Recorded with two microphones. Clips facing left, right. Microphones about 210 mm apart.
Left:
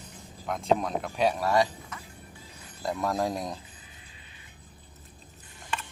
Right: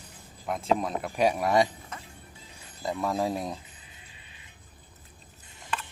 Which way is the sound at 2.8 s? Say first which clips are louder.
Even; centre (ahead or behind).